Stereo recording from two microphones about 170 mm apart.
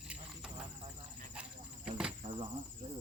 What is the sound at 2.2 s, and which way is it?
Speech, 30° right (ahead or behind).